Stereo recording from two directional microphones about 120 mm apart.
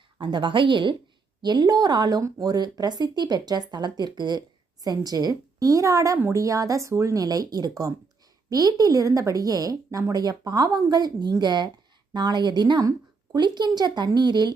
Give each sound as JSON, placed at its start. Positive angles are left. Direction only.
{"t": 0.2, "sound": "speech", "side_deg": -40}